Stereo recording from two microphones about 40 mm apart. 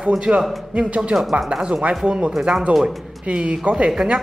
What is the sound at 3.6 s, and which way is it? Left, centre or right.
Speech, right.